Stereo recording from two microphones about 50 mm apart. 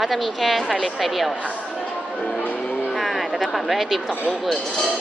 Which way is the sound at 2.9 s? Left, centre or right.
Centre.